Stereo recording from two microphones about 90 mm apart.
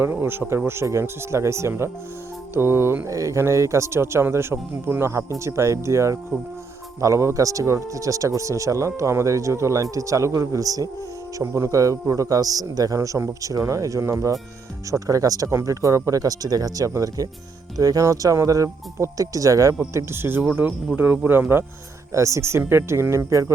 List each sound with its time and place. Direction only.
0.0 s speech: 25° right (ahead or behind)
19.9 s speech: 30° right (ahead or behind)